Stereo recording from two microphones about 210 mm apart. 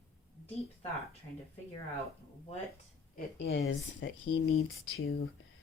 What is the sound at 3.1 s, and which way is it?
Speech, 50° left (ahead or behind).